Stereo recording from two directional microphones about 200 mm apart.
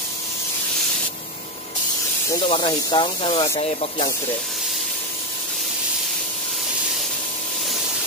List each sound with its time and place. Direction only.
2.5 s speech: 25° left (ahead or behind)